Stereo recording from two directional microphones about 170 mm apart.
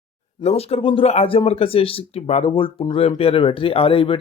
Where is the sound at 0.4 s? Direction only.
35° left (ahead or behind).